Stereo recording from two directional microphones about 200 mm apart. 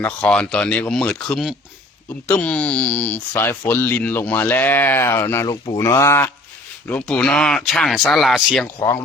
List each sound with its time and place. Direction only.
0.0 s speech: 5° left (ahead or behind)
8.6 s speech: 15° left (ahead or behind)